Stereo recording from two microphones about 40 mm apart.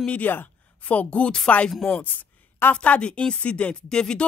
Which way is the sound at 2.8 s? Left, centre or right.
Left.